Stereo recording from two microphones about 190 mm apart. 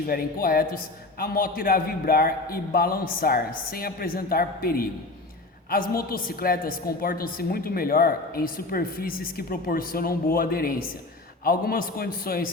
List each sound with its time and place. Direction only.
0.1 s a woman's voice: 50° left (ahead or behind)